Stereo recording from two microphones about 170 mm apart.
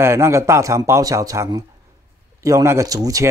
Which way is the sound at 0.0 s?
15° right (ahead or behind).